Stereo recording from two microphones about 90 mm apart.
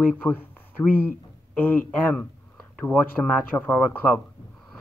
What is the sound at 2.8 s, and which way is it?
Speech, 15° left (ahead or behind).